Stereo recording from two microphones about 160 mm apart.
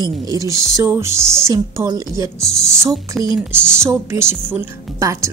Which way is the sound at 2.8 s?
20° right (ahead or behind).